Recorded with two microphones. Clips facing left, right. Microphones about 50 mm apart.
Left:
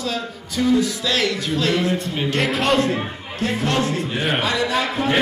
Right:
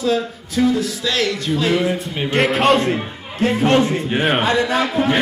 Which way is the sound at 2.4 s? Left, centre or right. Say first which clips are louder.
Right 5 dB; centre.